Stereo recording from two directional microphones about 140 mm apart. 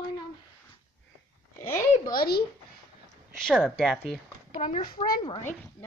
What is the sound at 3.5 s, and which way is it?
Speech, 5° right (ahead or behind).